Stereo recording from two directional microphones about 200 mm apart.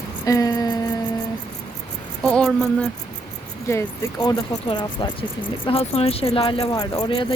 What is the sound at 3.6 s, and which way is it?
Speech, 15° left (ahead or behind).